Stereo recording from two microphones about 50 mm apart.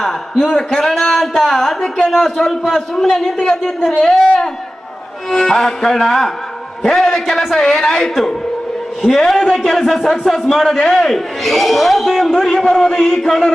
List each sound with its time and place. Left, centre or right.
0.0 s a man's voice: centre